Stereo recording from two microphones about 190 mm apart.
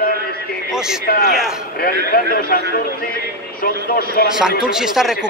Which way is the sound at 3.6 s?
50° left (ahead or behind).